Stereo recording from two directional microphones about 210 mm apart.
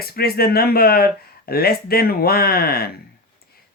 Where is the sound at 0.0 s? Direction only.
45° left (ahead or behind).